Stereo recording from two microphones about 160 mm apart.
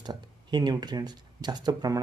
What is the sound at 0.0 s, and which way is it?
Speech, 25° right (ahead or behind).